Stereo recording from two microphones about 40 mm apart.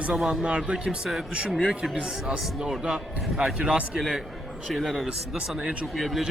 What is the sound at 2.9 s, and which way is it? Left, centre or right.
Speech, centre.